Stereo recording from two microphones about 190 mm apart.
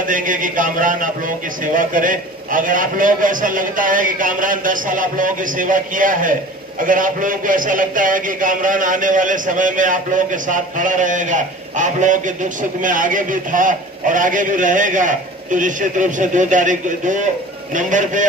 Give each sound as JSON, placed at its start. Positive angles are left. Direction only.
{"t": 0.0, "sound": "a man's voice", "side_deg": -45}